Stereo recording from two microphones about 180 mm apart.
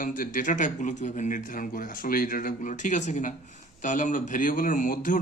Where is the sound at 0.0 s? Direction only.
45° left (ahead or behind).